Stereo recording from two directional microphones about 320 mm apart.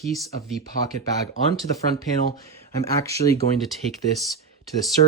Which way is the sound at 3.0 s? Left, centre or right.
Centre.